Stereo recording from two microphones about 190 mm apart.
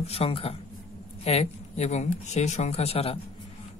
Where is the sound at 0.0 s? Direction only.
30° left (ahead or behind).